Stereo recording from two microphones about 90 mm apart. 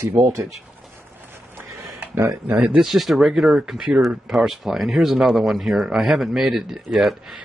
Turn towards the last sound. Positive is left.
turn(degrees=0)  # may be behind; listen again after turning